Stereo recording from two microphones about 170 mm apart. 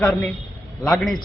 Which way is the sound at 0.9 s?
Centre (ahead or behind).